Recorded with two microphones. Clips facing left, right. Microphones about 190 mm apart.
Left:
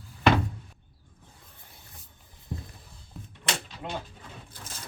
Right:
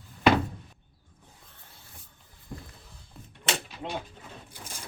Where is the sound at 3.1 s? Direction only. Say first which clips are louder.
Right 1 dB; centre (ahead or behind).